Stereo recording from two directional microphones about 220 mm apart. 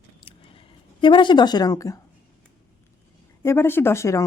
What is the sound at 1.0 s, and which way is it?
Speech, 20° left (ahead or behind).